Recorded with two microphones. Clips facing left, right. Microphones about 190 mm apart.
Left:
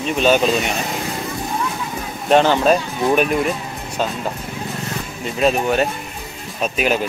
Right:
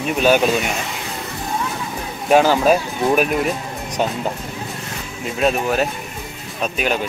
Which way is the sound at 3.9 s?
15° right (ahead or behind).